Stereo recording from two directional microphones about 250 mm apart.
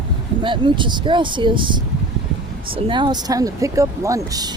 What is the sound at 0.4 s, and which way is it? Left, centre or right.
Speech, centre.